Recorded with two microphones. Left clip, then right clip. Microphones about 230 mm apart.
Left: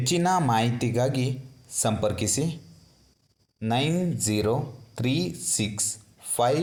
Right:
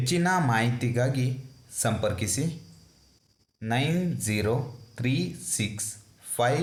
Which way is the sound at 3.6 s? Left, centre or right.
Left.